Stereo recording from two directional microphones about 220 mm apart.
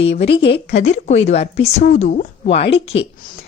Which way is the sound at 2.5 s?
55° left (ahead or behind).